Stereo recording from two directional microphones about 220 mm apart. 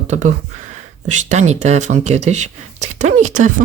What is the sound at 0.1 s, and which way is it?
Speech, 35° right (ahead or behind).